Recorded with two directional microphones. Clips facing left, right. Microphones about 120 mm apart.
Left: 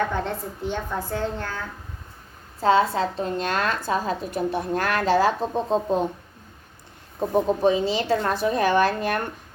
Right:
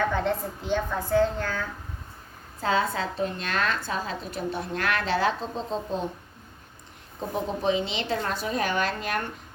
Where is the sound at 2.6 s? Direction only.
35° left (ahead or behind); by 6.0 s 55° left (ahead or behind).